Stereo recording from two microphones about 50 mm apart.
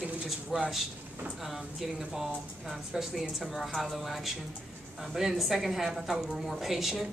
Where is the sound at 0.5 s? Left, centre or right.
Centre.